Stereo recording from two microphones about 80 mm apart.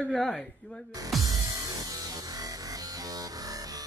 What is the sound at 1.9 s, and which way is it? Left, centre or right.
Music, right.